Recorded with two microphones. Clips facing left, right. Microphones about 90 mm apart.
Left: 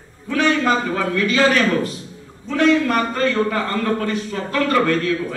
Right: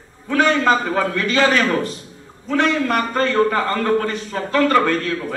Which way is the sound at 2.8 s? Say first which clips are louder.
Even; 40° right (ahead or behind).